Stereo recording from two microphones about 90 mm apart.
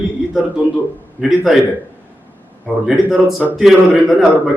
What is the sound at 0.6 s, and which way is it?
Speech, 15° right (ahead or behind).